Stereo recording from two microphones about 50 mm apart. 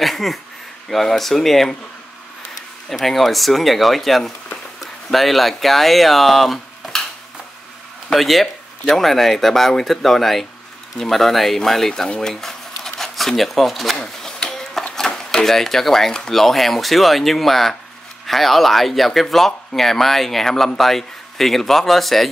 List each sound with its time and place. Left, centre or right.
0.0 s speech: centre
2.9 s speech: centre
8.1 s speech: centre
14.0 s a sound: centre
15.0 s speech: centre